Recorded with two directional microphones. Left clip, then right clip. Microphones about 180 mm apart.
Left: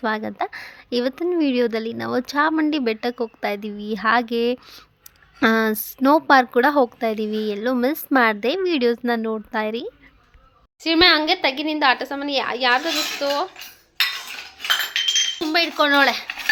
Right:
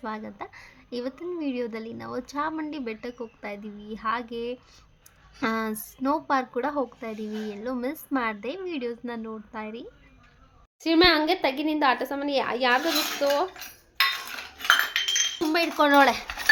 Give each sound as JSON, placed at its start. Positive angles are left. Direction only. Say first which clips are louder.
{"t": 0.0, "sound": "a woman's voice", "louder": "left 11 dB", "side_deg": 45}
{"t": 10.8, "sound": "a woman's voice", "louder": "left 4 dB", "side_deg": 0}
{"t": 15.4, "sound": "speech", "louder": "left 4 dB", "side_deg": 0}